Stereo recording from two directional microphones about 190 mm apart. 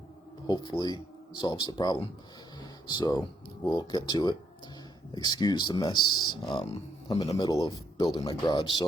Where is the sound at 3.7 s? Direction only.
20° left (ahead or behind).